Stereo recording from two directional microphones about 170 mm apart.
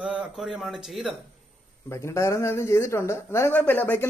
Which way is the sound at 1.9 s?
15° left (ahead or behind).